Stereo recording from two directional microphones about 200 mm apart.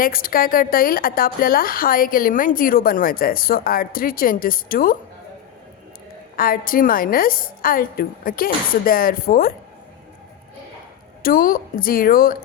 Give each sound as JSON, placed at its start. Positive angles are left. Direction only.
{"t": 0.0, "sound": "a woman's voice", "side_deg": 45}
{"t": 6.3, "sound": "a woman's voice", "side_deg": 45}
{"t": 11.2, "sound": "a woman's voice", "side_deg": 45}